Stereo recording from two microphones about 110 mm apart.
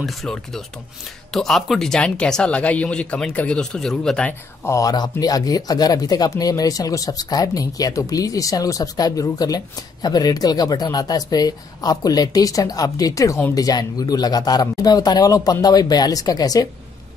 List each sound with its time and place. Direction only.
0.0 s speech: centre (ahead or behind)
4.6 s speech: 30° left (ahead or behind)